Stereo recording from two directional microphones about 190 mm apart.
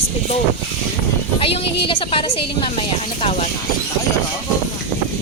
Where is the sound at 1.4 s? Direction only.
30° left (ahead or behind).